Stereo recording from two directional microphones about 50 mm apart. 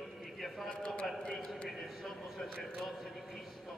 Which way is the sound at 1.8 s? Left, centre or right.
Centre.